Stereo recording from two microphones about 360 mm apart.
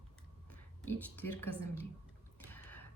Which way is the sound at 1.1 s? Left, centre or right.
Left.